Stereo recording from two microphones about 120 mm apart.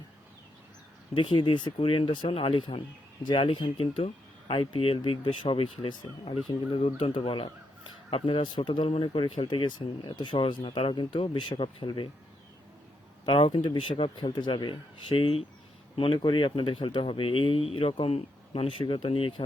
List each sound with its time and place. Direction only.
1.1 s speech: 45° left (ahead or behind)
13.2 s speech: 45° left (ahead or behind)